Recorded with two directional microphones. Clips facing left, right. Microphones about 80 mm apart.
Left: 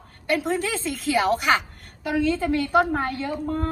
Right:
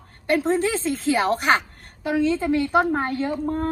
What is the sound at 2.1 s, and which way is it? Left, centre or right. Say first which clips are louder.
A woman's voice: right 2 dB; right.